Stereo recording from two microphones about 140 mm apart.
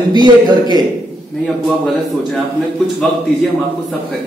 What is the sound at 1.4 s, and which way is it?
Speech, centre (ahead or behind).